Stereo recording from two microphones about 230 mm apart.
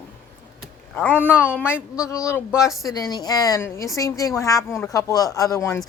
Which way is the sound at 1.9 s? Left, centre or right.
Centre.